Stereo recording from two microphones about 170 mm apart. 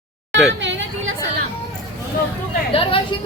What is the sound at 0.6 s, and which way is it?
Hubbub, 90° right.